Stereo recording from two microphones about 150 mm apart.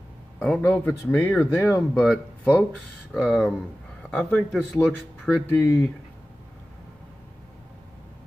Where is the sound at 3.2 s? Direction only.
5° right (ahead or behind).